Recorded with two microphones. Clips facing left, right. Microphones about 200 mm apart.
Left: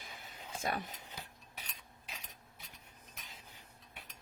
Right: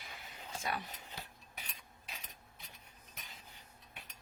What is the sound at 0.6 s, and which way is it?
Speech, 50° left (ahead or behind).